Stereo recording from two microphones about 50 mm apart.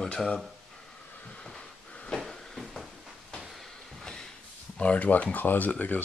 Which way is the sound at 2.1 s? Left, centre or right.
Centre.